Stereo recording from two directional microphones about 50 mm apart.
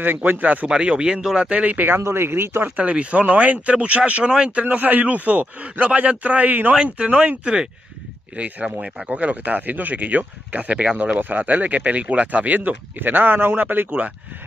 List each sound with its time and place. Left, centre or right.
0.0 s speech: right
0.7 s speech: centre
2.0 s speech: right
2.7 s speech: right
6.7 s speech: right
13.8 s speech: right